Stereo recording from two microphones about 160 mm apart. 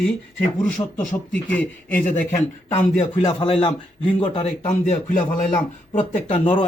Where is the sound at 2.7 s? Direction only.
40° left (ahead or behind).